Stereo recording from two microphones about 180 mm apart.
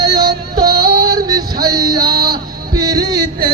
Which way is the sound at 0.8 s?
60° right (ahead or behind).